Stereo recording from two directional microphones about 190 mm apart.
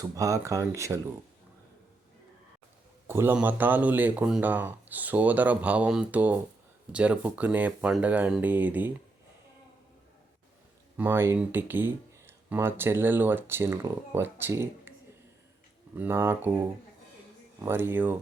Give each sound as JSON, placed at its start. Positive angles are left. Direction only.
{"t": 0.0, "sound": "speech", "side_deg": -15}
{"t": 3.1, "sound": "speech", "side_deg": -10}
{"t": 10.9, "sound": "speech", "side_deg": -10}
{"t": 16.0, "sound": "speech", "side_deg": -10}
{"t": 17.7, "sound": "speech", "side_deg": -10}